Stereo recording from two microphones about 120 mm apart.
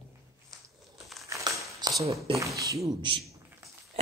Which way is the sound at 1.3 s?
25° right (ahead or behind).